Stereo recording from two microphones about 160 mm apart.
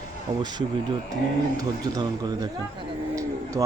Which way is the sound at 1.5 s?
20° right (ahead or behind).